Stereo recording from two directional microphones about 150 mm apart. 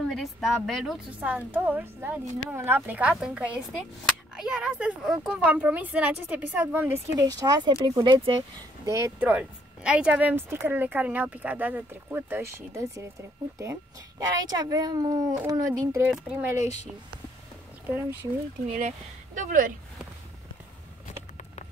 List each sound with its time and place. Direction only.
0.0 s speech: centre (ahead or behind); by 8.4 s 30° right (ahead or behind)
8.8 s speech: 20° right (ahead or behind)
9.3 s speech: 5° right (ahead or behind)
14.4 s speech: 25° right (ahead or behind)
16.1 s speech: 5° right (ahead or behind)
17.9 s speech: 15° right (ahead or behind)
18.7 s speech: 55° right (ahead or behind)